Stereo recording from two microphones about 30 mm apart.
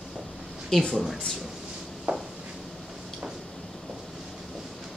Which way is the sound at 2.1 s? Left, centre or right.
Right.